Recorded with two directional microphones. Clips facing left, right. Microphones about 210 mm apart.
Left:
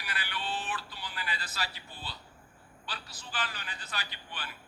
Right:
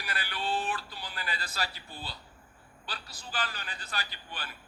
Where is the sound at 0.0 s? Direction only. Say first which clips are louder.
Right 3 dB; 40° right (ahead or behind).